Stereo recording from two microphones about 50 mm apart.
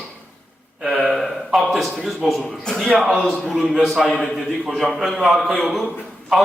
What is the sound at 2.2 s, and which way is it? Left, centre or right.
Speech, centre.